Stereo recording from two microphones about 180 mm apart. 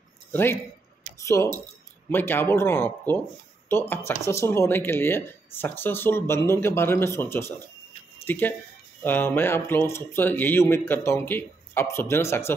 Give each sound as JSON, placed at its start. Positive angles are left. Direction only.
{"t": 0.3, "sound": "a man's voice", "side_deg": 10}